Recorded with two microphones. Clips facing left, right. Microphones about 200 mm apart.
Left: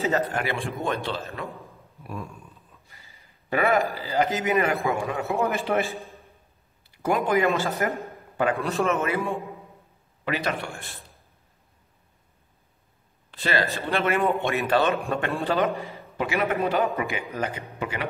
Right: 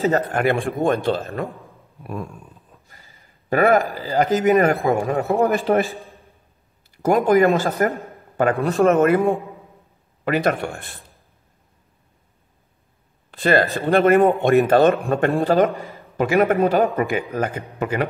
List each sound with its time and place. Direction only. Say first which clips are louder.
0.1 s a man's voice: right 6 dB; 55° right (ahead or behind)
2.9 s a sound: right 3 dB; 45° right (ahead or behind)
4.1 s a man's voice: right 8 dB; 40° right (ahead or behind)
5.9 s a sound: even; centre (ahead or behind)
7.0 s a man's voice: right 7 dB; 45° right (ahead or behind)
13.3 s a man's voice: right 8 dB; 50° right (ahead or behind)
15.7 s a man's voice: right 1 dB; 15° left (ahead or behind)
16.2 s a man's voice: right 8 dB; 45° right (ahead or behind)